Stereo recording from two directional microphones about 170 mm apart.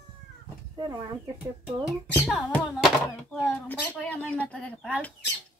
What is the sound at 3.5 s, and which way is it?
Speech, 10° left (ahead or behind).